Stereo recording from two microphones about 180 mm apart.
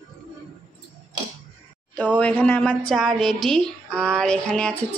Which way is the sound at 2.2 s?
10° left (ahead or behind).